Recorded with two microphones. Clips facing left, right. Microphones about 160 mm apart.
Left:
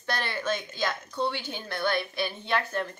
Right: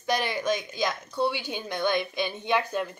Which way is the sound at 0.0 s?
15° right (ahead or behind).